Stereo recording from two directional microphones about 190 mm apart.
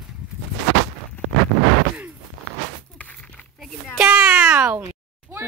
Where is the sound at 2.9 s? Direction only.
5° left (ahead or behind).